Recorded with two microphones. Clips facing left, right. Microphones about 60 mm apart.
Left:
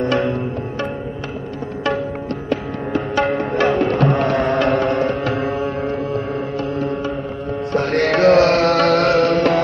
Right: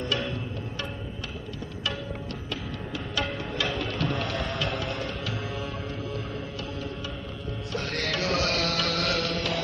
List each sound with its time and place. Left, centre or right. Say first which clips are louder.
0.0 s music: left 12 dB; left
2.5 s music: left 15 dB; left
7.7 s music: left 14 dB; left